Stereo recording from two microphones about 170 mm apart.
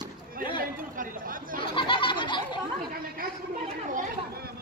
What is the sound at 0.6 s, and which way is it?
Speech, 55° right (ahead or behind).